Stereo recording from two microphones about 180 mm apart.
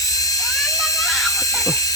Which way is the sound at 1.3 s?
20° left (ahead or behind).